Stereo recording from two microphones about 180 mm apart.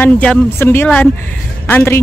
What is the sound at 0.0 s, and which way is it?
Speech, 10° left (ahead or behind).